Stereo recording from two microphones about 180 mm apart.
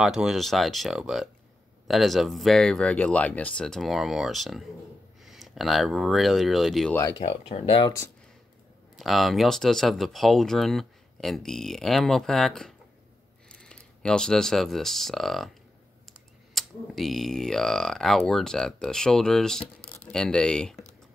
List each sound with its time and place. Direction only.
0.0 s speech: 5° right (ahead or behind)
7.2 s speech: 30° left (ahead or behind)
8.9 s speech: centre (ahead or behind)